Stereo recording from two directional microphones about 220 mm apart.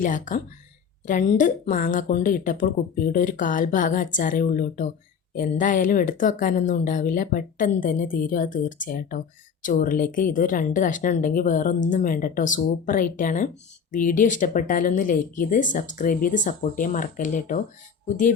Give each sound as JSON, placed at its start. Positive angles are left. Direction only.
{"t": 0.0, "sound": "speech", "side_deg": 35}